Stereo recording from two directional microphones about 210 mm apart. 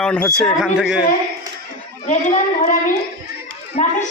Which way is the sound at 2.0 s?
35° left (ahead or behind).